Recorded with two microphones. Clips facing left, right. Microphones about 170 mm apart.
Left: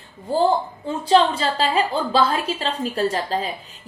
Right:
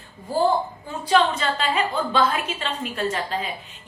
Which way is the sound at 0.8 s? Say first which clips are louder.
Left 4 dB; 30° left (ahead or behind).